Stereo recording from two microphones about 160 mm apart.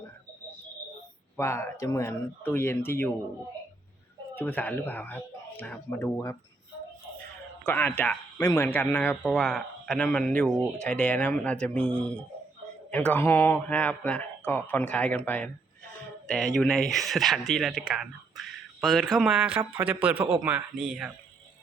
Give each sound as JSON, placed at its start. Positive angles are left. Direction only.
{"t": 1.4, "sound": "speech", "side_deg": 15}
{"t": 4.4, "sound": "speech", "side_deg": 10}
{"t": 7.6, "sound": "a man's voice", "side_deg": 10}